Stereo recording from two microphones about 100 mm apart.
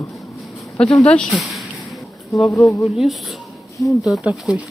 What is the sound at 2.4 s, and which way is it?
Speech, 30° left (ahead or behind).